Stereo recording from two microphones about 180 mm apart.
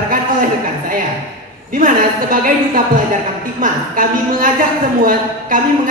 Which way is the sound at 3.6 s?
50° right (ahead or behind).